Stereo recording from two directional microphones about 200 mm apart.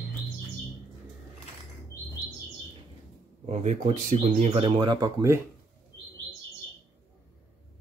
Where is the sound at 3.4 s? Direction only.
35° right (ahead or behind); by 5.4 s 15° right (ahead or behind).